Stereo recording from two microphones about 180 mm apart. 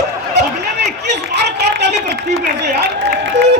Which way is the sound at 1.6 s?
70° right (ahead or behind).